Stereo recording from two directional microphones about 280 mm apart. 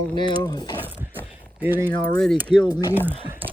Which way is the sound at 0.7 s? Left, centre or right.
Centre.